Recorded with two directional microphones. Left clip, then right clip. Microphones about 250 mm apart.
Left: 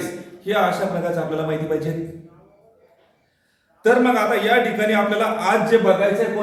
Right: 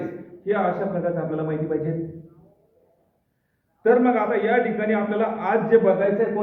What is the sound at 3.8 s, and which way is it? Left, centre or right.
A man's voice, centre.